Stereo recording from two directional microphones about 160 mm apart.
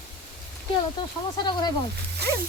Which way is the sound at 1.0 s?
30° left (ahead or behind).